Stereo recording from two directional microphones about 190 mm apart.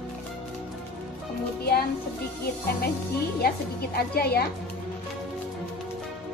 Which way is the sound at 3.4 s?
55° left (ahead or behind).